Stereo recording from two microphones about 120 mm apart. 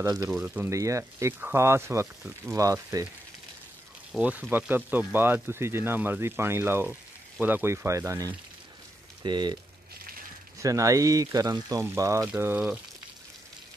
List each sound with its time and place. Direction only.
0.0 s speech: 25° right (ahead or behind)
0.3 s speech: 5° right (ahead or behind)
0.7 s speech: 25° right (ahead or behind)
4.1 s speech: 10° right (ahead or behind)
9.2 s speech: 40° right (ahead or behind)
10.6 s speech: 25° right (ahead or behind)